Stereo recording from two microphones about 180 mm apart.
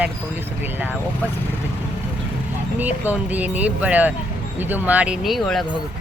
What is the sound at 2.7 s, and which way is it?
Speech, 10° right (ahead or behind).